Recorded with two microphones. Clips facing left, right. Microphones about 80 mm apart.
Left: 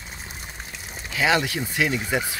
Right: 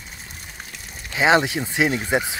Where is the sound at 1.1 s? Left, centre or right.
Right.